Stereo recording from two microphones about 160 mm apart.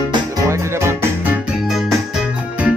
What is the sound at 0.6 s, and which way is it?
Music, 15° right (ahead or behind).